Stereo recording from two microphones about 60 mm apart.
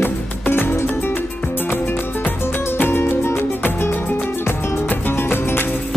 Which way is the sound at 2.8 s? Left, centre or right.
Left.